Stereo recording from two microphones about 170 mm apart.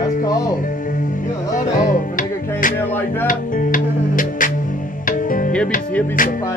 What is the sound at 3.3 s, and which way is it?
Music, 55° left (ahead or behind).